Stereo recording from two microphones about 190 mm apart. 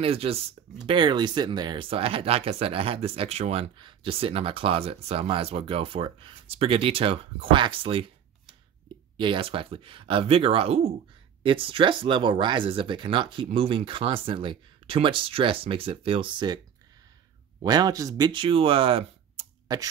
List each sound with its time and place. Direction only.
0.0 s speech: 30° right (ahead or behind)
9.1 s speech: 25° right (ahead or behind)
17.6 s speech: 20° right (ahead or behind)